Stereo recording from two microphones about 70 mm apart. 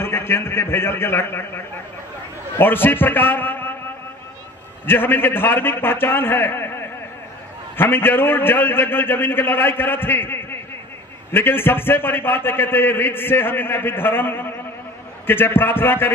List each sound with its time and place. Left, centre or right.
0.0 s a man's voice: left
2.6 s a man's voice: left
4.8 s a man's voice: left